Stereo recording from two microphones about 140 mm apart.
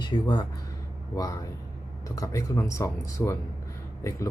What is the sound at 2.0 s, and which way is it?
Speech, 25° left (ahead or behind).